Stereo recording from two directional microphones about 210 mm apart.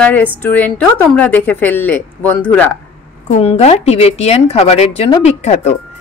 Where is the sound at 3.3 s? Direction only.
30° left (ahead or behind).